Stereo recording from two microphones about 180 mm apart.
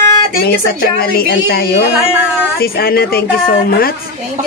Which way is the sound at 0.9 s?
60° left (ahead or behind).